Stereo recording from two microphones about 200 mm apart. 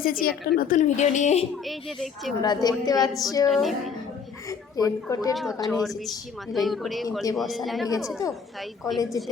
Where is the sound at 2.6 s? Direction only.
20° left (ahead or behind).